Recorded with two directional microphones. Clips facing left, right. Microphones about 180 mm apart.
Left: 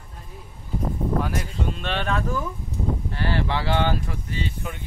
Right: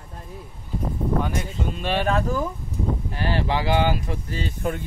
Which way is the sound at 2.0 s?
35° right (ahead or behind).